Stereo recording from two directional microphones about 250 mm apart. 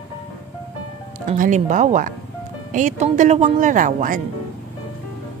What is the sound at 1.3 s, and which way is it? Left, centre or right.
Speech, right.